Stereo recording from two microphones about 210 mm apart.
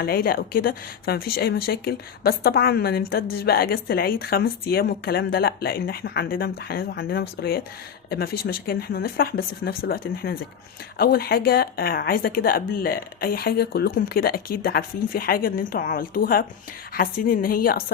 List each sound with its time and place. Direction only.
0.0 s speech: 45° left (ahead or behind)